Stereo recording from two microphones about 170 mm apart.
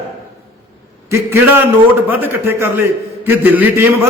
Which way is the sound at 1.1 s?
15° right (ahead or behind).